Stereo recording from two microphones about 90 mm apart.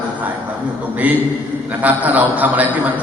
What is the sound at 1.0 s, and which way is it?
A man's voice, 15° right (ahead or behind).